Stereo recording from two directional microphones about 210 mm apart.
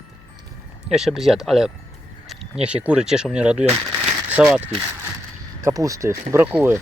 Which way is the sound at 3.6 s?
30° right (ahead or behind).